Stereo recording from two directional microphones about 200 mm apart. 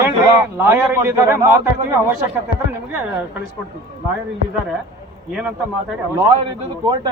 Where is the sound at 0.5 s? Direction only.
10° right (ahead or behind).